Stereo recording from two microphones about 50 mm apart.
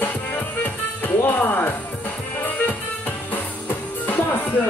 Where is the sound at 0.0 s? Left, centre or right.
Left.